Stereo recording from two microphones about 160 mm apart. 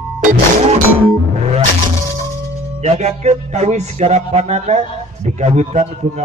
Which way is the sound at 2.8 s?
45° right (ahead or behind).